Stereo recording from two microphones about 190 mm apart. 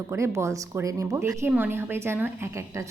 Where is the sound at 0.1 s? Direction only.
15° right (ahead or behind).